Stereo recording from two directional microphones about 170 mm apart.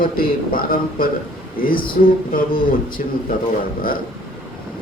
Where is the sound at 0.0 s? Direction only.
60° left (ahead or behind).